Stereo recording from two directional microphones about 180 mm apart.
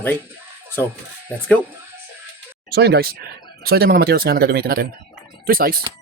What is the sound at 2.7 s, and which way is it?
Speech, 60° right (ahead or behind).